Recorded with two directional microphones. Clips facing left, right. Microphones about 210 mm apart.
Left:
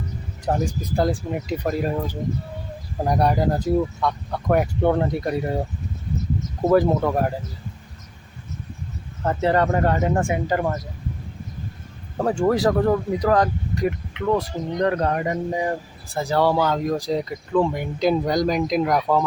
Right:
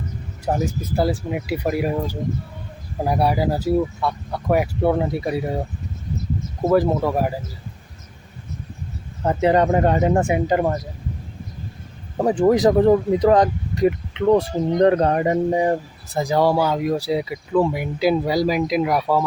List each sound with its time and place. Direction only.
0.4 s speech: 5° right (ahead or behind)
6.6 s speech: 5° right (ahead or behind)
9.2 s speech: 15° right (ahead or behind)
12.1 s speech: 15° right (ahead or behind)
16.1 s speech: 15° right (ahead or behind)